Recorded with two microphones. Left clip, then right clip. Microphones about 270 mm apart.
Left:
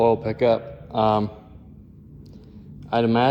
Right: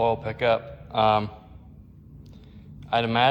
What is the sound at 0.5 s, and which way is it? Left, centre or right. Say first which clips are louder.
Speech: left 1 dB; right.